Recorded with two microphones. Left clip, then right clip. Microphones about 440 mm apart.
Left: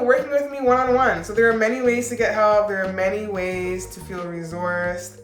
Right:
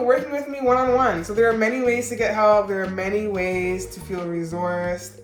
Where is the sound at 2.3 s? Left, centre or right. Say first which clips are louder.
Right 1 dB; left.